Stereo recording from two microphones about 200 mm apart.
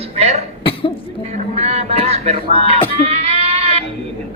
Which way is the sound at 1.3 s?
35° right (ahead or behind).